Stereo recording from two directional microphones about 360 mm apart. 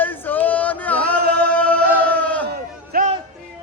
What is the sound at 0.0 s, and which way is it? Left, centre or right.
Male singing, centre.